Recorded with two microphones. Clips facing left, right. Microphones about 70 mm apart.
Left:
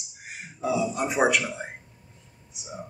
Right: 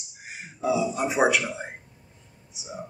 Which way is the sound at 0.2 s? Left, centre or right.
Centre.